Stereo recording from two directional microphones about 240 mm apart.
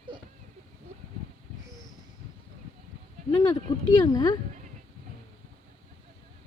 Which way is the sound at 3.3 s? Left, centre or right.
Centre.